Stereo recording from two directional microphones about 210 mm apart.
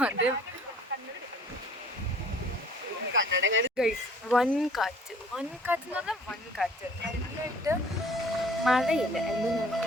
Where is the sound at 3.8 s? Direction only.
Centre (ahead or behind).